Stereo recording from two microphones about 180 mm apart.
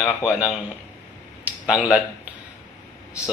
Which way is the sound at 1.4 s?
5° right (ahead or behind).